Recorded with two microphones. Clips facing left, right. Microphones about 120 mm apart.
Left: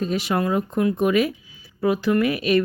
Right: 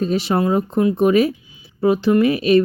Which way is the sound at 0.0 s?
30° right (ahead or behind).